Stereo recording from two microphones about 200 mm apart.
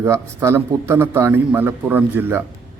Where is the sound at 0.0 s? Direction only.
15° right (ahead or behind).